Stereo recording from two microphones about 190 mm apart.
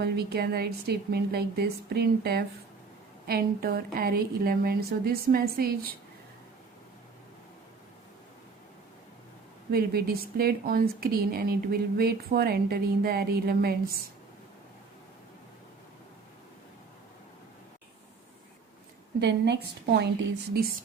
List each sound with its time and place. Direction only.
0.0 s a woman's voice: 55° right (ahead or behind)
9.7 s a woman's voice: 50° right (ahead or behind)
19.2 s a woman's voice: 65° right (ahead or behind)